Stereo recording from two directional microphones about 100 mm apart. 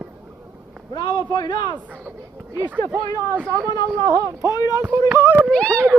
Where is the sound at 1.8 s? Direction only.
15° right (ahead or behind).